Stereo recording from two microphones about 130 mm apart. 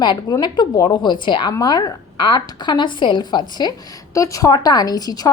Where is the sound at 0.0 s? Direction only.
30° left (ahead or behind).